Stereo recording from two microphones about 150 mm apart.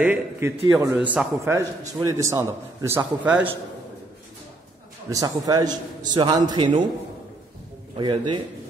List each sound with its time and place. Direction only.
0.0 s a man's voice: 10° right (ahead or behind)
5.1 s a man's voice: 25° right (ahead or behind)
8.0 s a man's voice: 30° right (ahead or behind)